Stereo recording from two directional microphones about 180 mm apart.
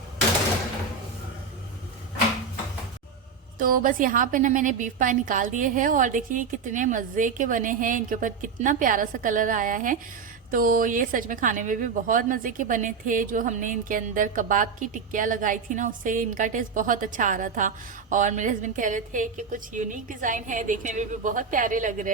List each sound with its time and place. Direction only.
3.6 s a woman's voice: 50° right (ahead or behind)